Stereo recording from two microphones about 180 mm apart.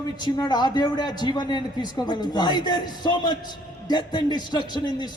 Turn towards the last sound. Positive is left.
turn(degrees=25)  # may be behind; listen again after turning